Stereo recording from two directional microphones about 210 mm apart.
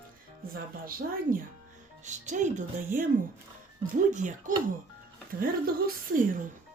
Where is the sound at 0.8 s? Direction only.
45° right (ahead or behind).